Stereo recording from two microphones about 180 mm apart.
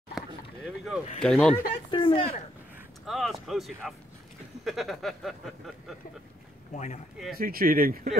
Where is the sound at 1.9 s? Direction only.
30° left (ahead or behind).